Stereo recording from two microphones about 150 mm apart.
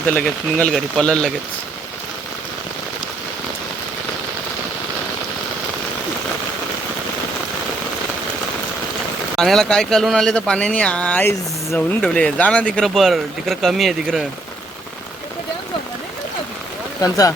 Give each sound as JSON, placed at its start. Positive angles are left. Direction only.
{"t": 0.1, "sound": "speech", "side_deg": 10}
{"t": 9.3, "sound": "speech", "side_deg": 5}
{"t": 17.0, "sound": "speech", "side_deg": 25}